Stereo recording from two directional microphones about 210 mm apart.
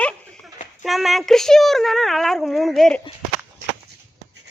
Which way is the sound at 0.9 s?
Centre (ahead or behind).